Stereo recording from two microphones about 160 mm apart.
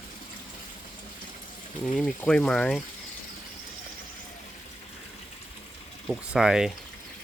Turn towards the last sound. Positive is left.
turn(degrees=-5)  # may be behind; listen again after turning